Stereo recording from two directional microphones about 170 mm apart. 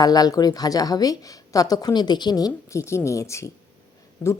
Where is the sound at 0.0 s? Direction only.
20° left (ahead or behind).